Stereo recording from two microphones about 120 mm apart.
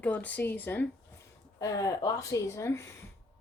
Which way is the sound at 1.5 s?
30° left (ahead or behind).